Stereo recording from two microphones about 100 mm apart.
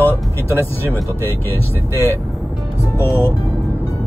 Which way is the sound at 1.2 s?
20° left (ahead or behind).